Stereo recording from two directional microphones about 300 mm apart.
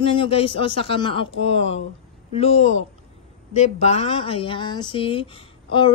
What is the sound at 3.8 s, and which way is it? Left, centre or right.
A woman's voice, left.